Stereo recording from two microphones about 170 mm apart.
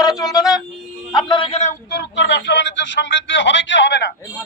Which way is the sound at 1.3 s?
30° left (ahead or behind).